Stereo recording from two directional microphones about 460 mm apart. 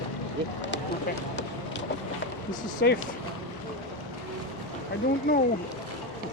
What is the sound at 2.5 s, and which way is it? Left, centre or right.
Speech, left.